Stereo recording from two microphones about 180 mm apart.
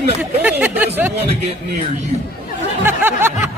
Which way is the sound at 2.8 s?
10° right (ahead or behind).